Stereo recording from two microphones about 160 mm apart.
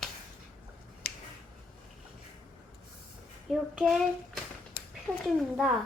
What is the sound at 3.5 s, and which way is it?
Child singing, centre (ahead or behind).